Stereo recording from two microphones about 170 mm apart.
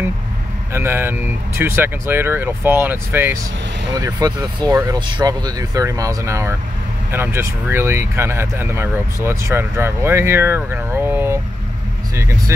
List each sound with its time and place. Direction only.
0.7 s speech: 15° right (ahead or behind)
3.9 s speech: 25° right (ahead or behind)